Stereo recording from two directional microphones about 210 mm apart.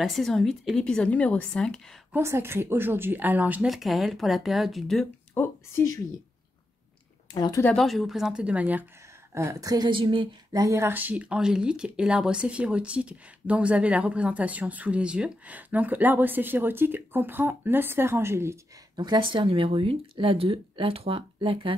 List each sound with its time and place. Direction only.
0.0 s a woman's voice: centre (ahead or behind)
2.1 s a woman's voice: 10° right (ahead or behind); by 5.9 s 10° left (ahead or behind)
7.3 s speech: 20° left (ahead or behind)
7.6 s a woman's voice: centre (ahead or behind); by 21.7 s 25° right (ahead or behind)